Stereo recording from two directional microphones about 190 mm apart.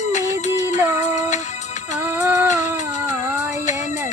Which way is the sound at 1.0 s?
40° left (ahead or behind).